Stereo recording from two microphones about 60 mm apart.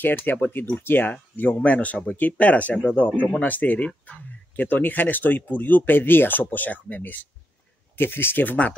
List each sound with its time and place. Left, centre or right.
0.0 s speech: left